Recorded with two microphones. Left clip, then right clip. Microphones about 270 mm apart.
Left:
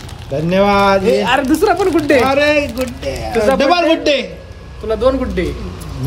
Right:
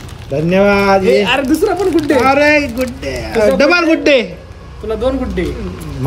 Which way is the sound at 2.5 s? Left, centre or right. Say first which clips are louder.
Right 2 dB; right.